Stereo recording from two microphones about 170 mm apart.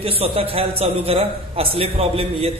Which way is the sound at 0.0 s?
35° right (ahead or behind).